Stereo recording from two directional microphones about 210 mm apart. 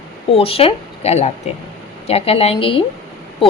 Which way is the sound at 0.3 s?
25° left (ahead or behind).